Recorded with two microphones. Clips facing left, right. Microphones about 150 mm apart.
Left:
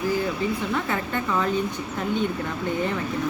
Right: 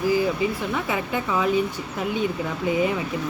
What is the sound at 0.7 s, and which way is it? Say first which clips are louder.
Speech: right 1 dB; 10° right (ahead or behind).